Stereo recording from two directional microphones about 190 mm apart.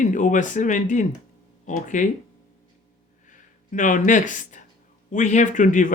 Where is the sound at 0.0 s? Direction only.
45° left (ahead or behind).